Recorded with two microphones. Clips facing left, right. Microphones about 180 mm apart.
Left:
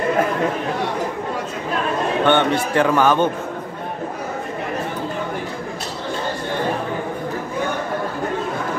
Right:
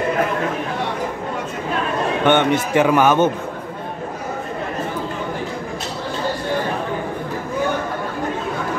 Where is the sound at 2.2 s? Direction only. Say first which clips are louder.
Right 2 dB; 20° right (ahead or behind).